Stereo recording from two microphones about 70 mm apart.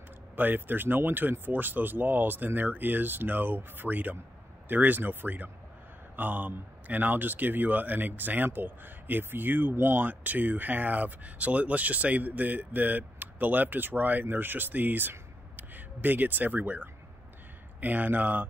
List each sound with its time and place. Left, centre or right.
0.4 s speech: right